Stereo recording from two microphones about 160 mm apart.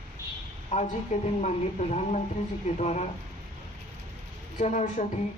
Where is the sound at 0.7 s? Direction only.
45° left (ahead or behind).